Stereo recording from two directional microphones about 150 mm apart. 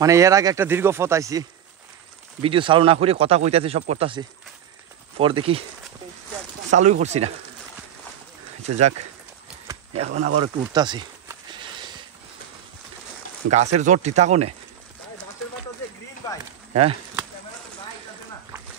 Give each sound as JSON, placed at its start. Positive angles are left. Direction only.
{"t": 0.0, "sound": "speech", "side_deg": -20}
{"t": 2.4, "sound": "speech", "side_deg": -35}
{"t": 6.7, "sound": "speech", "side_deg": -50}
{"t": 8.6, "sound": "speech", "side_deg": -45}
{"t": 9.9, "sound": "speech", "side_deg": -50}
{"t": 10.4, "sound": "a sound", "side_deg": -30}
{"t": 13.5, "sound": "speech", "side_deg": -50}